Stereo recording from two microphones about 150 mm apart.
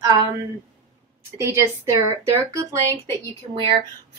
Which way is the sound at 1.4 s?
20° right (ahead or behind).